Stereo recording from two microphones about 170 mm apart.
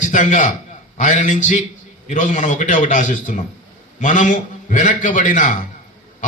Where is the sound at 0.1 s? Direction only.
50° left (ahead or behind).